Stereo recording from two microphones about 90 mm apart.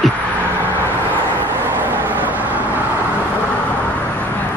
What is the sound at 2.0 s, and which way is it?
Vehicle, 20° right (ahead or behind).